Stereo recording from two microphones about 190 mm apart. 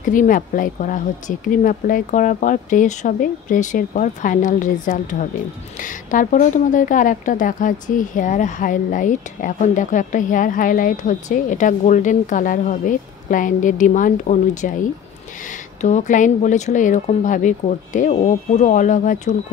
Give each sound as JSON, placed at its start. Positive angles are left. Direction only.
{"t": 0.0, "sound": "speech", "side_deg": 45}
{"t": 15.8, "sound": "speech", "side_deg": 40}